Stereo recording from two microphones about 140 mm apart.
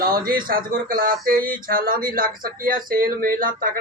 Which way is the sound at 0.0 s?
90° right.